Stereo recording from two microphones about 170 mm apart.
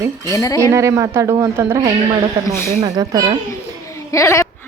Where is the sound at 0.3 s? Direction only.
20° left (ahead or behind).